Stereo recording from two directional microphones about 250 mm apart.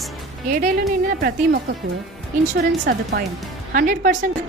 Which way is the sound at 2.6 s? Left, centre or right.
Right.